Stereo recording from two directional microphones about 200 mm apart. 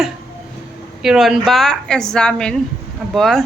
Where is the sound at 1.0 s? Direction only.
Centre (ahead or behind).